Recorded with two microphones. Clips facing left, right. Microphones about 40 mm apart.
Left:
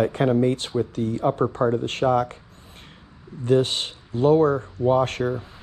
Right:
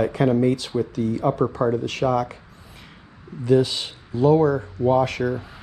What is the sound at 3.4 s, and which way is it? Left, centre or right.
Speech, left.